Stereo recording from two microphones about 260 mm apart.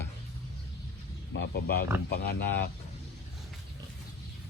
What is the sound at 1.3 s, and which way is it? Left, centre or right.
Speech, left.